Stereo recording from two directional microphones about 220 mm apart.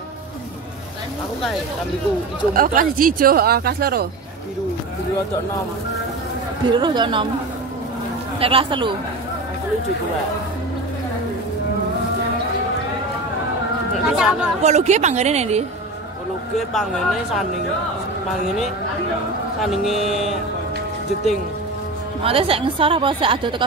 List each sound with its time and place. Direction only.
2.5 s speech: 40° right (ahead or behind)
6.6 s a woman's voice: 20° right (ahead or behind)
8.4 s a woman's voice: 25° right (ahead or behind)
14.0 s speech: 5° right (ahead or behind)
14.6 s speech: 30° right (ahead or behind)
19.6 s speech: centre (ahead or behind)
22.2 s a woman's voice: 25° right (ahead or behind)